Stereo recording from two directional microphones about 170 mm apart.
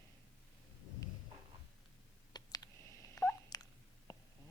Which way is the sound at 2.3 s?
20° left (ahead or behind).